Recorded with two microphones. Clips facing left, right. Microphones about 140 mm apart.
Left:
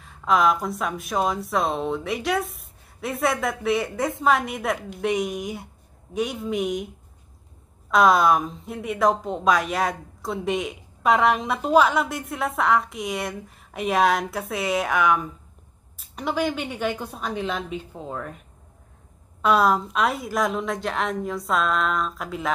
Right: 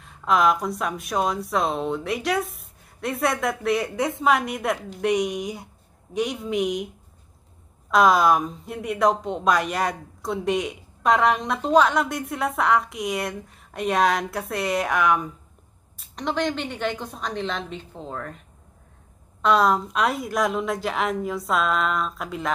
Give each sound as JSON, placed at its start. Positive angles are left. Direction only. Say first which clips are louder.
{"t": 0.0, "sound": "a woman's voice", "louder": "even", "side_deg": 0}
{"t": 7.9, "sound": "a woman's voice", "louder": "even", "side_deg": 0}
{"t": 19.4, "sound": "a woman's voice", "louder": "even", "side_deg": 5}